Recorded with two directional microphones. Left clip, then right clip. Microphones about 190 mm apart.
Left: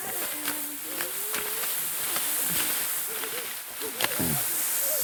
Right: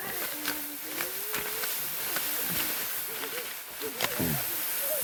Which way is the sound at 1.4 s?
35° left (ahead or behind).